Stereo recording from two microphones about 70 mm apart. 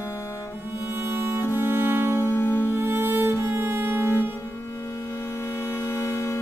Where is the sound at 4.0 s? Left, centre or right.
Left.